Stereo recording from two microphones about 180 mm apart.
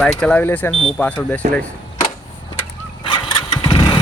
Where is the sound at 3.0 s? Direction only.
30° left (ahead or behind).